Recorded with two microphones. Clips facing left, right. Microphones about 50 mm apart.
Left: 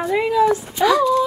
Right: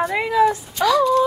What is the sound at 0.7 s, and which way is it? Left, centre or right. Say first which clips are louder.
Speech: left 1 dB; centre.